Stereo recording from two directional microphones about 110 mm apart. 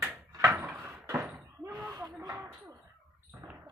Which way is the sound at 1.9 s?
30° right (ahead or behind).